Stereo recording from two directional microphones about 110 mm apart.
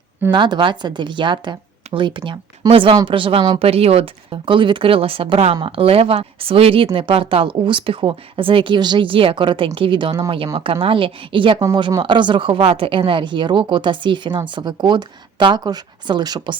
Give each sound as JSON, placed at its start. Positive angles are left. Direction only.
{"t": 0.3, "sound": "speech", "side_deg": -45}
{"t": 3.6, "sound": "speech", "side_deg": -65}
{"t": 11.6, "sound": "speech", "side_deg": -35}